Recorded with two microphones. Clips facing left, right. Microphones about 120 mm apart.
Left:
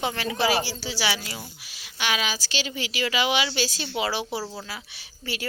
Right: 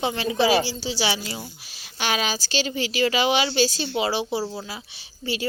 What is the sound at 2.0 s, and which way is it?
A woman's voice, 35° right (ahead or behind).